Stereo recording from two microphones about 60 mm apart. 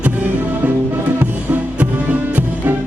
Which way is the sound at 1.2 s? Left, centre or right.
Right.